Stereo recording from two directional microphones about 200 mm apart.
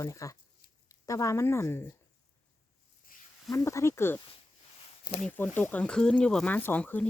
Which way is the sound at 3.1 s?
45° left (ahead or behind).